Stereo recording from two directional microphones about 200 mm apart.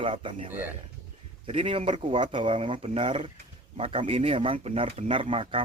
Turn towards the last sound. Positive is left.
turn(degrees=-25)  # may be behind; listen again after turning